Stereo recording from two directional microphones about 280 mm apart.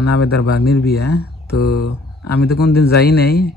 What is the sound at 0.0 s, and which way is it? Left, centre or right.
Speech, left.